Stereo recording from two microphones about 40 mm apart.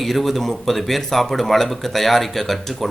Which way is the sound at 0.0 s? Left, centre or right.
Centre.